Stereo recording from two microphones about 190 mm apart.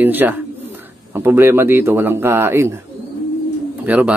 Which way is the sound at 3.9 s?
10° right (ahead or behind).